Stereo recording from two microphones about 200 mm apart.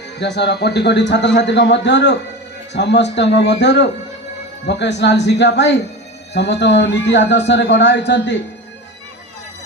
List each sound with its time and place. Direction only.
0.2 s a man's voice: 60° left (ahead or behind)